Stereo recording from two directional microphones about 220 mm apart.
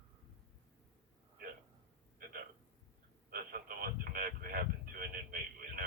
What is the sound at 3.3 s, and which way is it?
Radio, 40° right (ahead or behind).